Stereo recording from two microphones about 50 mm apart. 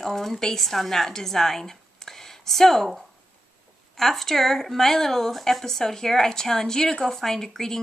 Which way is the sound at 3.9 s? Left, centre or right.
Centre.